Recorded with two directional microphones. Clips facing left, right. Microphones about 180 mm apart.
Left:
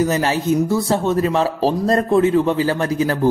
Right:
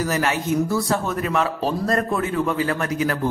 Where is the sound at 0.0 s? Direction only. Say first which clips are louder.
Left 5 dB; 30° left (ahead or behind).